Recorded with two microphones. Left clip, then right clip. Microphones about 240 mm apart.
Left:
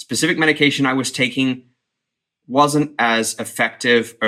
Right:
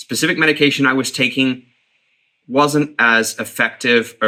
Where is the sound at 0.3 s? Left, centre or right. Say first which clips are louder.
Right 2 dB; right.